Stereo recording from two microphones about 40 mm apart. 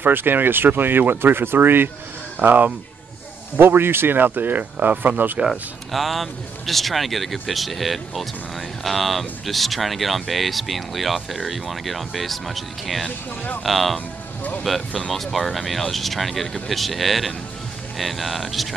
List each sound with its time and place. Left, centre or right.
0.0 s speech: right
2.4 s speech: right
3.5 s speech: right
5.5 s speech: centre